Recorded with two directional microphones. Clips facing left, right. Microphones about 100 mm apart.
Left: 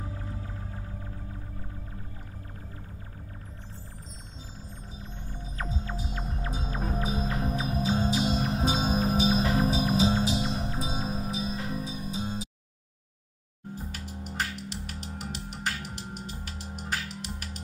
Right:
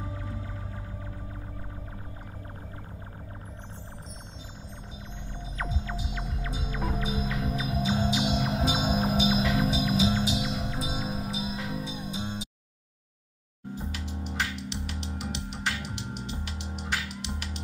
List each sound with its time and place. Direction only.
5.3 s hum: 40° left (ahead or behind)
13.9 s music: 40° left (ahead or behind)